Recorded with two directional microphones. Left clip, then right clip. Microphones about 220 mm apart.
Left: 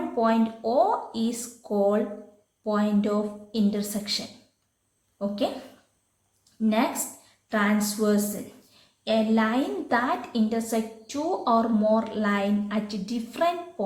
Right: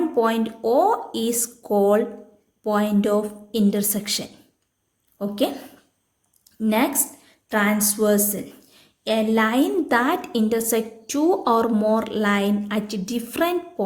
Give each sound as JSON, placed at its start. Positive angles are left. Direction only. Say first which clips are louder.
{"t": 0.2, "sound": "a woman's voice", "louder": "right 1 dB", "side_deg": -45}
{"t": 6.6, "sound": "a woman's voice", "louder": "right 4 dB", "side_deg": -45}